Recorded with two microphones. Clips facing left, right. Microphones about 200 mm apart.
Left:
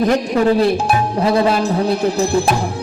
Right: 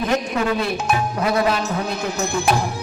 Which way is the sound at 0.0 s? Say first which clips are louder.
Left 6 dB; 35° left (ahead or behind).